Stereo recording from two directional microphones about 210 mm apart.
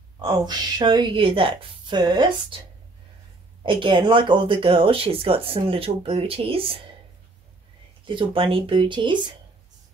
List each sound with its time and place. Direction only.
0.2 s speech: 20° right (ahead or behind)
3.6 s speech: 25° right (ahead or behind)
8.1 s speech: 25° right (ahead or behind)